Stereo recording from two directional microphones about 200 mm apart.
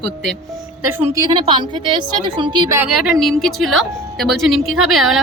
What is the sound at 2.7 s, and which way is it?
A woman's voice, centre (ahead or behind).